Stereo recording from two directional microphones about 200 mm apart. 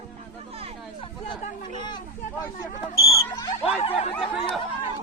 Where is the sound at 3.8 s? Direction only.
30° left (ahead or behind).